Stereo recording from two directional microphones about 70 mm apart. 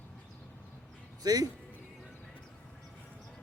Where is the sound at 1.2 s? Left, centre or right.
Right.